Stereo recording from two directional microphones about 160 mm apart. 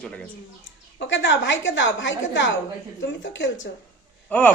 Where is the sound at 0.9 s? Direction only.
90° left.